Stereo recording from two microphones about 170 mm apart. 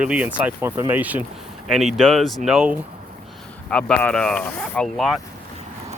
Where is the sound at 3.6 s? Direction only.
5° left (ahead or behind).